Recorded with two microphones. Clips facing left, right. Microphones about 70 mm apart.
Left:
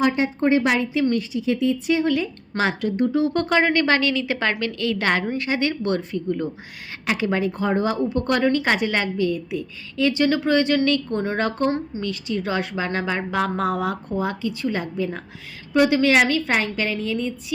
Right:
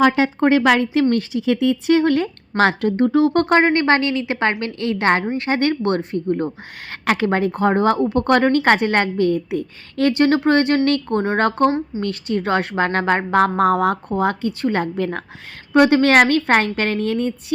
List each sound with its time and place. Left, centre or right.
0.0 s speech: right
3.5 s a woman's voice: right
5.4 s a woman's voice: right